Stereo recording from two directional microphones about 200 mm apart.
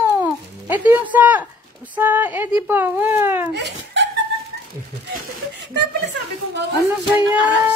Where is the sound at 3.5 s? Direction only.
60° right (ahead or behind).